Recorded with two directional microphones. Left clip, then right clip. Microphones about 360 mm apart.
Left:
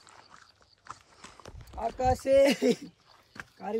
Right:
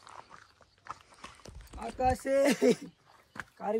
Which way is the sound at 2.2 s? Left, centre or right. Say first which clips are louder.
Left 5 dB; centre.